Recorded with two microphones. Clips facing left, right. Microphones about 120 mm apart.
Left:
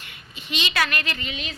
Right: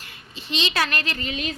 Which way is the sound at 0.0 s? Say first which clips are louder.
Right 1 dB; 35° right (ahead or behind).